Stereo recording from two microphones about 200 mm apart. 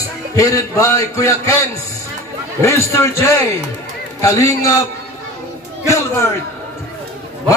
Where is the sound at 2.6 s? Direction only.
15° left (ahead or behind).